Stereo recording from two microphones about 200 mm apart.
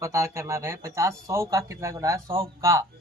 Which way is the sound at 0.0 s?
15° right (ahead or behind).